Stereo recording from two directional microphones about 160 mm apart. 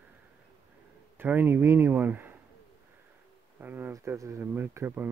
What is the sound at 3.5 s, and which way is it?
Speech, 10° right (ahead or behind).